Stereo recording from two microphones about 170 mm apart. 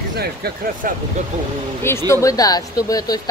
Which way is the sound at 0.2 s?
60° right (ahead or behind).